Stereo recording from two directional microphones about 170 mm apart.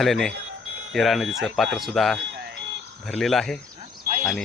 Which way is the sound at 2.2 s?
90° right.